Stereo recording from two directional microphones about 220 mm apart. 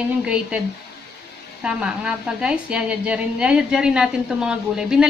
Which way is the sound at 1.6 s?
5° right (ahead or behind).